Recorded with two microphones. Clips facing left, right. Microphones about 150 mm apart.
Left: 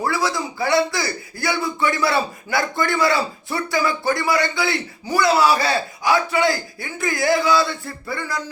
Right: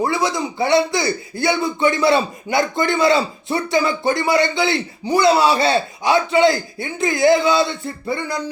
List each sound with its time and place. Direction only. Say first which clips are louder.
0.0 s speech: right 3 dB; 20° right (ahead or behind)